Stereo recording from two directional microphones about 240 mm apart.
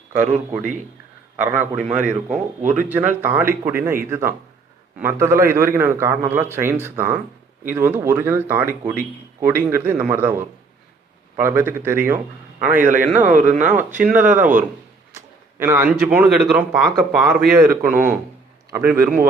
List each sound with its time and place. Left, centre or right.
0.1 s a man's voice: centre
13.2 s speech: right
14.0 s speech: centre
15.1 s a sound: centre
16.1 s a man's voice: centre